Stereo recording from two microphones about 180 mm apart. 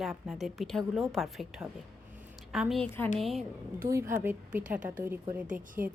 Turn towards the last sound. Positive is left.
turn(degrees=-50)  # may be behind; listen again after turning